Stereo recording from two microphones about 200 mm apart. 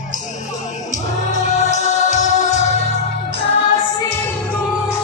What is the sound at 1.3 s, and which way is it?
Music, 35° left (ahead or behind).